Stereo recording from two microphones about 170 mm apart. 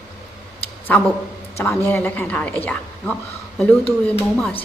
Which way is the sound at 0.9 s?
10° left (ahead or behind).